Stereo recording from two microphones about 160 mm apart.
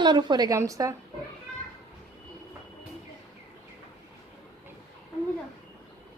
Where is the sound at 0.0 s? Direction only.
30° right (ahead or behind).